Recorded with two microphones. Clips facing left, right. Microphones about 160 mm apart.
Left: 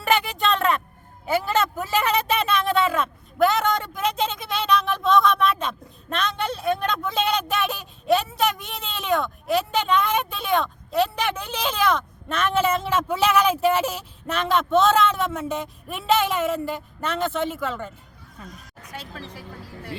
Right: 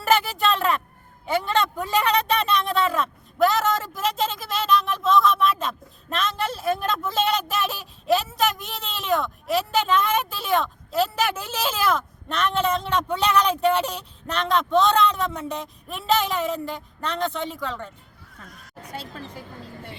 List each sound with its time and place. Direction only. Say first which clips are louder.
0.0 s a sound: right 1 dB; centre (ahead or behind)
1.3 s speech: left 1 dB; 5° left (ahead or behind)
18.4 s speech: left 5 dB; 20° left (ahead or behind)